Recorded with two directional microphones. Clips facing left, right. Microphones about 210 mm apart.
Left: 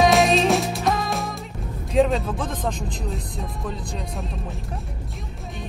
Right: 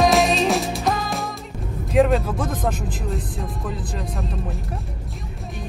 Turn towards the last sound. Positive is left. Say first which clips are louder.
# right 2 dB
turn(degrees=0)  # may be behind; listen again after turning